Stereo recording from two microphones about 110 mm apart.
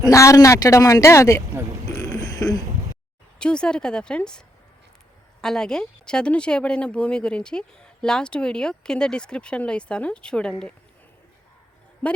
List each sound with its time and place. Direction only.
0.0 s speech: 30° left (ahead or behind)
2.0 s a sound: 30° left (ahead or behind)
3.3 s speech: 10° left (ahead or behind)